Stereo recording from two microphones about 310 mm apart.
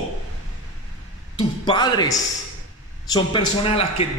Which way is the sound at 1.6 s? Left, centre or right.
Centre.